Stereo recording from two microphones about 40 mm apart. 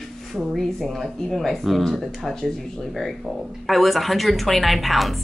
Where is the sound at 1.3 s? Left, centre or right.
Centre.